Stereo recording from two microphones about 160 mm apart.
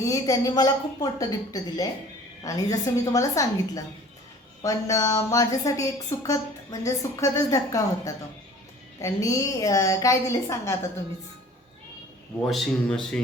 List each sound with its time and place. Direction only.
0.0 s a woman's voice: 20° left (ahead or behind)
12.5 s speech: centre (ahead or behind)